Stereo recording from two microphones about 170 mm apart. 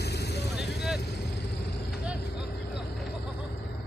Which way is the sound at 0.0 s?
75° left (ahead or behind).